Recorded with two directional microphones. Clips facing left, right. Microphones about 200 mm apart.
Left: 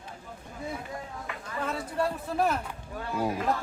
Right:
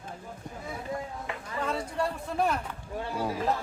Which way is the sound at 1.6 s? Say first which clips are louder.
Left 1 dB; 5° left (ahead or behind).